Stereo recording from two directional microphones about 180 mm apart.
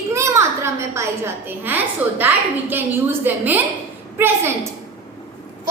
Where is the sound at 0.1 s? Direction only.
15° right (ahead or behind).